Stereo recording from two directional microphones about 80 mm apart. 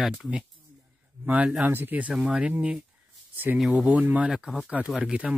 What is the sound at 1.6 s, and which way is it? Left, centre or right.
Speech, right.